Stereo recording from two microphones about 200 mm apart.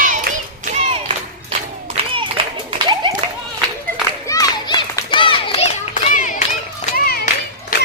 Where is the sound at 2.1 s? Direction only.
25° right (ahead or behind).